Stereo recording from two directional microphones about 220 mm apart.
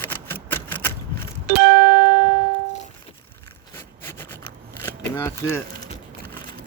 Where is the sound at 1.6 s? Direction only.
70° right (ahead or behind).